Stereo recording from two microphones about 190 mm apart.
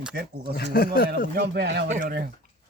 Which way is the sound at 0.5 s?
55° left (ahead or behind).